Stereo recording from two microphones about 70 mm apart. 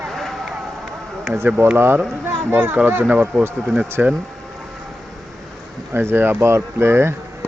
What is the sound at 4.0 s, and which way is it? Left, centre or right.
Speech, right.